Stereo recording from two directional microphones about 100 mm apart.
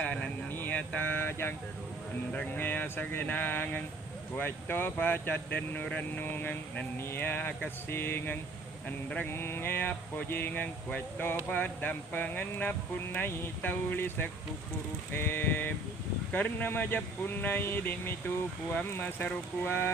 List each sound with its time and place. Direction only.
0.0 s speech: 15° left (ahead or behind)